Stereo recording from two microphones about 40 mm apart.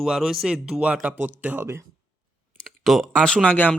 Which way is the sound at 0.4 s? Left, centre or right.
Right.